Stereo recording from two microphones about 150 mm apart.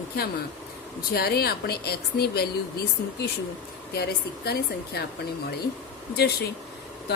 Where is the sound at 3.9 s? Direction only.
90° left.